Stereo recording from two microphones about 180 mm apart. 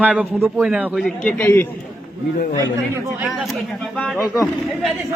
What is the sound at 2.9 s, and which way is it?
Speech, 5° right (ahead or behind).